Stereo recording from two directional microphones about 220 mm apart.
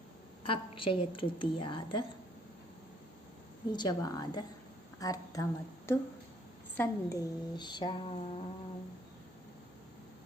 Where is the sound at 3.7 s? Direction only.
20° left (ahead or behind).